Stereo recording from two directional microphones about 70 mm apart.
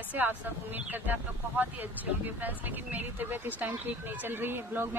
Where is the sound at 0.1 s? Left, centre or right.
Right.